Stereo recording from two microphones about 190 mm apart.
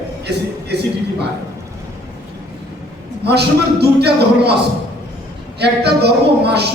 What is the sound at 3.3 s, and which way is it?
A man's voice, 60° right (ahead or behind).